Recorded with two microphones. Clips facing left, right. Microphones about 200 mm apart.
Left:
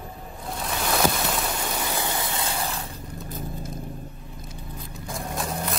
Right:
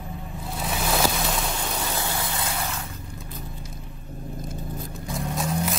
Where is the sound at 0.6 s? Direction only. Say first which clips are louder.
Left 1 dB; centre (ahead or behind); by 2.9 s 30° left (ahead or behind).